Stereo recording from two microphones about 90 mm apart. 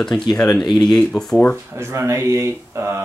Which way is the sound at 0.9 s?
5° left (ahead or behind).